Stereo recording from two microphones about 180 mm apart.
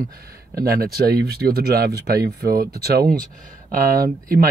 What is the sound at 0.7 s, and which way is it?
Speech, 55° right (ahead or behind).